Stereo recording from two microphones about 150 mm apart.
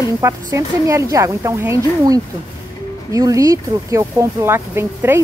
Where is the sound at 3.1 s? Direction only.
20° right (ahead or behind).